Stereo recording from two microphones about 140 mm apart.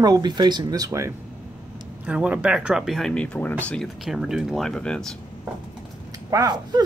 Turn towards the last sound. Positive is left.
turn(degrees=-30)  # may be behind; listen again after turning